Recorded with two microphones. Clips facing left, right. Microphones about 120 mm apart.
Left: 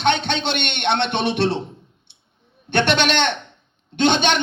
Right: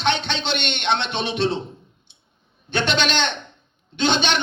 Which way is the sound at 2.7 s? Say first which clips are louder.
Left 4 dB; 60° left (ahead or behind).